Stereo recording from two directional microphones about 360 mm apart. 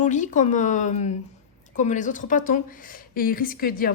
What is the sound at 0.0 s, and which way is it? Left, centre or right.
Speech, left.